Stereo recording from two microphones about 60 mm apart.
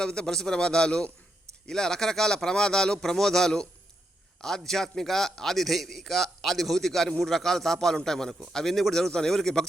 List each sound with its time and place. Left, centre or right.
0.0 s a man's voice: centre